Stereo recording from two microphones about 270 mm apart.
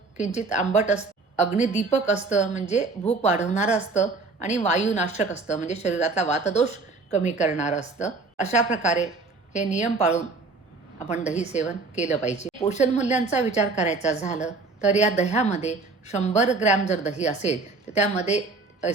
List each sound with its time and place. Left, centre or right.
0.2 s a woman's voice: left
11.3 s a woman's voice: left